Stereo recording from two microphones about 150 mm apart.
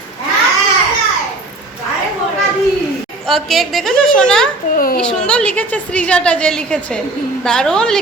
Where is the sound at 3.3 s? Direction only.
Centre (ahead or behind).